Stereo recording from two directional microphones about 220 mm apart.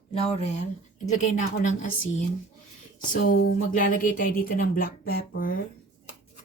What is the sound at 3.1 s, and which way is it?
Speech, 40° left (ahead or behind).